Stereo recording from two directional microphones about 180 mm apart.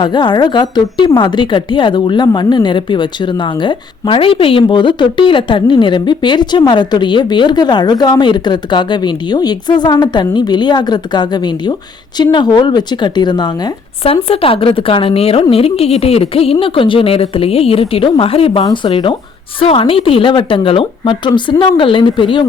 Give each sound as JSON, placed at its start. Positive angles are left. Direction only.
{"t": 0.0, "sound": "a woman's voice", "side_deg": 25}